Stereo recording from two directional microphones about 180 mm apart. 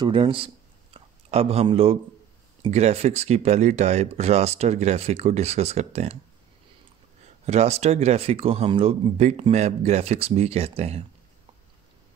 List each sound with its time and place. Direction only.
0.0 s speech: 30° right (ahead or behind)
0.9 s a sound: 35° right (ahead or behind)
2.7 s speech: 35° right (ahead or behind)
7.4 s speech: 35° right (ahead or behind)